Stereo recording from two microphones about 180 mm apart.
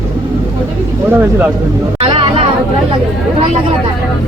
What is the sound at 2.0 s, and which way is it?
Music, 30° right (ahead or behind).